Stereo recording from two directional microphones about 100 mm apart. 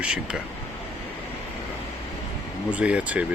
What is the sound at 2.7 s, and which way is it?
Speech, 15° right (ahead or behind).